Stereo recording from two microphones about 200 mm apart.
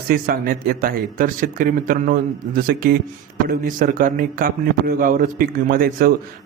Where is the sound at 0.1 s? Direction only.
45° right (ahead or behind).